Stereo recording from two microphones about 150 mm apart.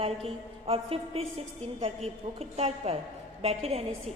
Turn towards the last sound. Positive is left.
turn(degrees=-40)  # may be behind; listen again after turning